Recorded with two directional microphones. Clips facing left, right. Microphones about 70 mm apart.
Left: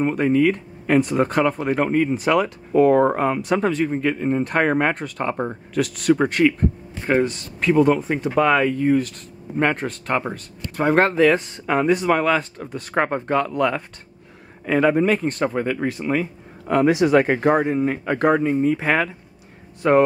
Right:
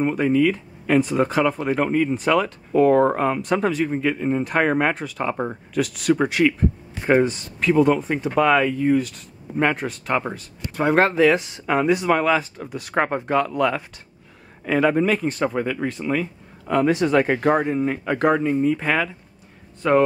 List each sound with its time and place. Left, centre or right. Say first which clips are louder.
0.0 s speech: left 1 dB; centre
7.0 s speech: right 2 dB; centre
7.7 s speech: left 1 dB; centre; by 20.0 s left